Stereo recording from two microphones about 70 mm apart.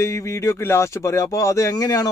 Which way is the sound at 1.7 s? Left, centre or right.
Left.